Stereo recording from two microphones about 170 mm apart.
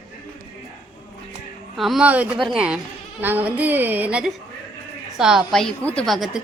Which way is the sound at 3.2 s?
10° right (ahead or behind).